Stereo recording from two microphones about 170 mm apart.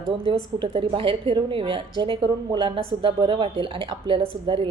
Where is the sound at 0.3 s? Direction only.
30° right (ahead or behind).